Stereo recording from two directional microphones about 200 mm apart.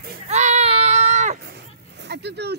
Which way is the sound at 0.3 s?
35° right (ahead or behind).